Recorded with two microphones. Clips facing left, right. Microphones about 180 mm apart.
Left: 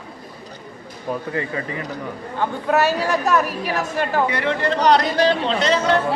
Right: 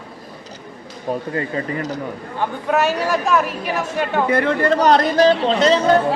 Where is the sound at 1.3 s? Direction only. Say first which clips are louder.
Right 3 dB; 40° right (ahead or behind).